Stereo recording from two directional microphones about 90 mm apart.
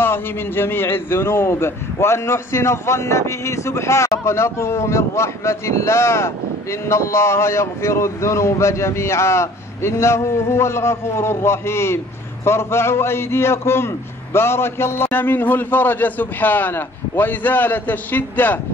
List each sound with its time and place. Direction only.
0.0 s a man's voice: 25° left (ahead or behind)